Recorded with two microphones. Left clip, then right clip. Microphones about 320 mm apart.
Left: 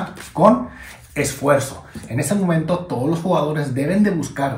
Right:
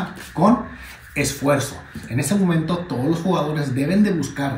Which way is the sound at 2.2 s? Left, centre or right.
Centre.